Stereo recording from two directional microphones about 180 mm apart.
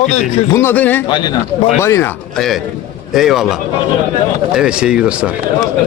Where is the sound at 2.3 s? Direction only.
Centre (ahead or behind).